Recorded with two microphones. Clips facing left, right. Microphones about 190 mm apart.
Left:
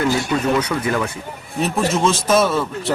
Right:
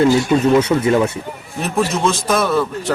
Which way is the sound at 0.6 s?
25° right (ahead or behind).